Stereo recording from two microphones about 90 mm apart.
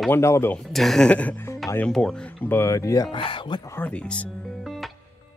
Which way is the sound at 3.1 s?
70° left (ahead or behind).